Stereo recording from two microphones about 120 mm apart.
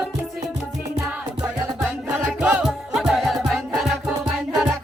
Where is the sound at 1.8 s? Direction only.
10° right (ahead or behind).